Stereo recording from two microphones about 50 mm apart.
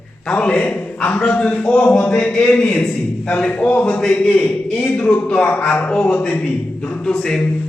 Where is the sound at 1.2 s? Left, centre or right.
Left.